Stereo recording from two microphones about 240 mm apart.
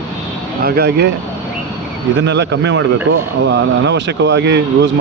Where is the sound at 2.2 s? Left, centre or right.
Right.